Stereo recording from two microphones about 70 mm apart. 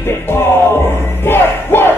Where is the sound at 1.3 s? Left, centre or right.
Left.